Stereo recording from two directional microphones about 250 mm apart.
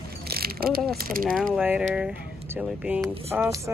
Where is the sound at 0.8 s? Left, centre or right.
Right.